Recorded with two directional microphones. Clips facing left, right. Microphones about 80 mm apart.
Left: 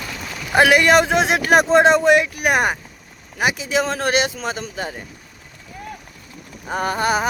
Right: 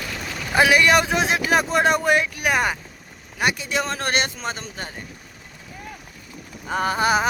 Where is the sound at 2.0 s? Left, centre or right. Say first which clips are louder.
Left 5 dB; left.